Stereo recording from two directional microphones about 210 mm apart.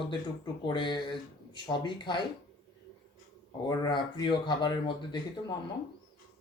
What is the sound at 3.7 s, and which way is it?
Speech, 20° left (ahead or behind).